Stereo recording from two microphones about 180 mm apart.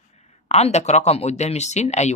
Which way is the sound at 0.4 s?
35° left (ahead or behind).